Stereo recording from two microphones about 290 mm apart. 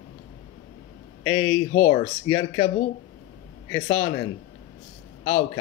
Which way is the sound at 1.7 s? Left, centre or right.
Left.